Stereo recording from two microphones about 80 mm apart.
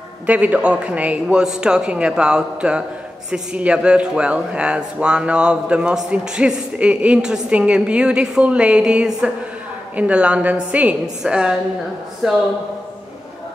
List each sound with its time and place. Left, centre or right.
0.3 s speech: centre